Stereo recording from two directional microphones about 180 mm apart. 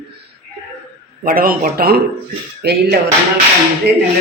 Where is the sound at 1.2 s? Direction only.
55° right (ahead or behind).